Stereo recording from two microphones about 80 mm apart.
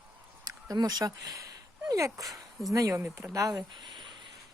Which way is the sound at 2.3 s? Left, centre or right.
Centre.